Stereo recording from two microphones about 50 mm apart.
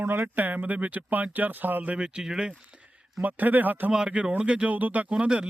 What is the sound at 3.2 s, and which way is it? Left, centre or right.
Speech, right.